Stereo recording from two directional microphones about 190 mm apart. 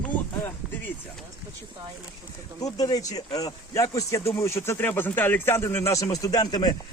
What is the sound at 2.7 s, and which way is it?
Speech, 20° left (ahead or behind).